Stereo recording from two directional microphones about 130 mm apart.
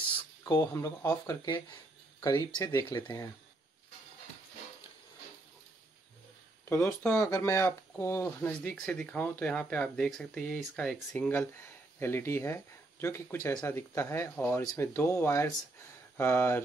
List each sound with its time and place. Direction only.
0.4 s speech: 25° left (ahead or behind)
6.6 s speech: 20° left (ahead or behind)
8.8 s speech: 10° left (ahead or behind)
12.0 s speech: 20° left (ahead or behind)